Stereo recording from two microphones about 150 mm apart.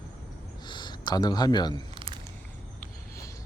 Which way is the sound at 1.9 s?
35° right (ahead or behind).